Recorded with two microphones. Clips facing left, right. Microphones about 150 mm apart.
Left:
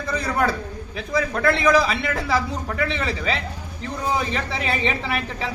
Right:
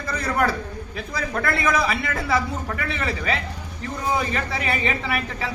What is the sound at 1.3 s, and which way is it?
Speech, 15° left (ahead or behind).